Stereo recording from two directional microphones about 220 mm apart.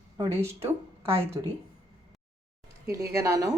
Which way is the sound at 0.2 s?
10° right (ahead or behind).